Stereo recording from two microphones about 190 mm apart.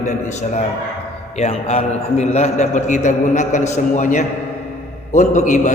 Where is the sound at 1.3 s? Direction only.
35° left (ahead or behind).